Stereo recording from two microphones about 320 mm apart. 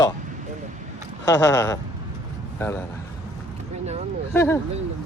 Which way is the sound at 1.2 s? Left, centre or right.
Centre.